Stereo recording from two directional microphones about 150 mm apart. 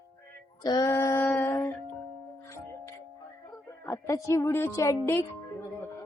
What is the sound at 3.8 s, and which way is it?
A woman's voice, 20° left (ahead or behind).